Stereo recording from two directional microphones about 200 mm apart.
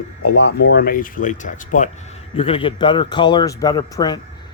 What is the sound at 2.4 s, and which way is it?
A man's voice, 25° left (ahead or behind).